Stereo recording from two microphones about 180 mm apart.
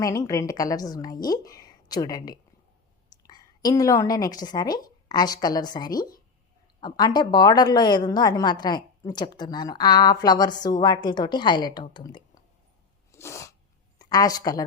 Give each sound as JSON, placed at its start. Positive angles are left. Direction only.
{"t": 0.0, "sound": "a woman's voice", "side_deg": 15}
{"t": 13.1, "sound": "sneeze", "side_deg": 15}
{"t": 14.0, "sound": "a woman's voice", "side_deg": 20}